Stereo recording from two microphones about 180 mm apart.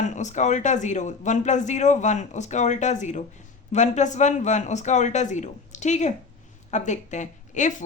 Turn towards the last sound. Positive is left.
turn(degrees=45)  # may be behind; listen again after turning